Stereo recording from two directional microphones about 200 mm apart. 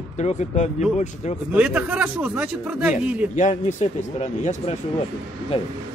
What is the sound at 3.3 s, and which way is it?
Speech, 35° left (ahead or behind).